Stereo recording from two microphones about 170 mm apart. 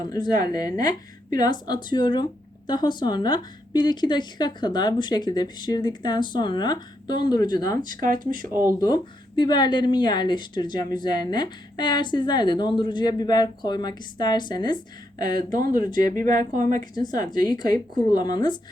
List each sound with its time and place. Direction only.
0.0 s a woman's voice: 25° left (ahead or behind)
8.0 s speech: 50° right (ahead or behind)
8.8 s a woman's voice: 25° left (ahead or behind)
15.4 s speech: 55° right (ahead or behind)
16.0 s a woman's voice: 20° left (ahead or behind)